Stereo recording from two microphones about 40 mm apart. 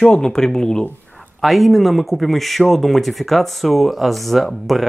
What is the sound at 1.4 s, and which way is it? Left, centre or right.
Speech, centre.